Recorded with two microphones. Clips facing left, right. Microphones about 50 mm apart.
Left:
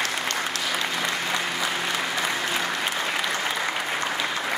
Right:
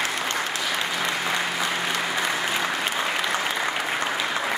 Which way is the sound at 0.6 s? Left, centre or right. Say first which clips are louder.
Right 1 dB; centre.